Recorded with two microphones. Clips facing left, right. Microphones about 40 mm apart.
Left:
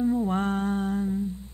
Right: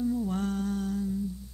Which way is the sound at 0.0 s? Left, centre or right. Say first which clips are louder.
Left 5 dB; left.